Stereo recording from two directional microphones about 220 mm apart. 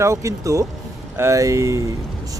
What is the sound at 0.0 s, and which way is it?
Speech, 15° right (ahead or behind).